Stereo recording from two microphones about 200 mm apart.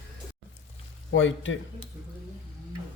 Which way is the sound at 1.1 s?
70° left (ahead or behind).